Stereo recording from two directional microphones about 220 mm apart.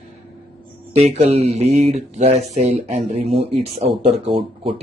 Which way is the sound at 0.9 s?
30° right (ahead or behind).